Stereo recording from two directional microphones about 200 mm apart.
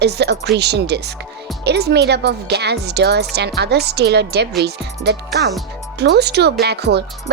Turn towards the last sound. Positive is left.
turn(degrees=-55)  # may be behind; listen again after turning